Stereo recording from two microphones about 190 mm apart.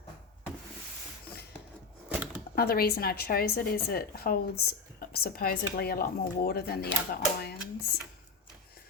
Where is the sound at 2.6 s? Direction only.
55° left (ahead or behind).